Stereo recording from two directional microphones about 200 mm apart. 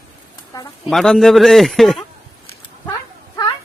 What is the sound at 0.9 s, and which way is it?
A man's voice, centre (ahead or behind).